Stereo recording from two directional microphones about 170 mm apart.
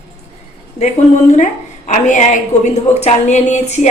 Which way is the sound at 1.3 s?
45° left (ahead or behind).